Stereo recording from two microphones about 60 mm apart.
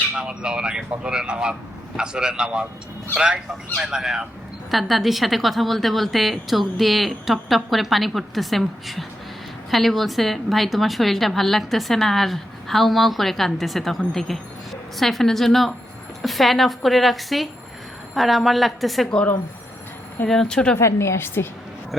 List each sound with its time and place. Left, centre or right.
0.2 s a woman's voice: centre
20.2 s speech: centre
20.7 s a woman's voice: left